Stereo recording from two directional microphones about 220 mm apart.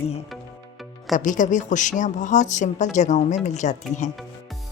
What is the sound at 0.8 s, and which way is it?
Music, centre (ahead or behind).